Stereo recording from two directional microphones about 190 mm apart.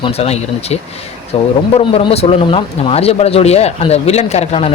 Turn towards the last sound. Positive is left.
turn(degrees=35)  # may be behind; listen again after turning